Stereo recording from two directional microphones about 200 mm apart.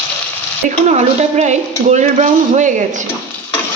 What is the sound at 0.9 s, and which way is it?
Speech, 35° right (ahead or behind).